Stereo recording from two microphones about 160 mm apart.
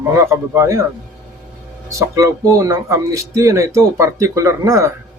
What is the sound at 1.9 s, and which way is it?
Speech, 20° right (ahead or behind).